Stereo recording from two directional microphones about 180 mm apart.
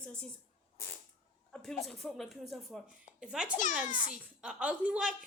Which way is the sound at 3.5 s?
45° left (ahead or behind).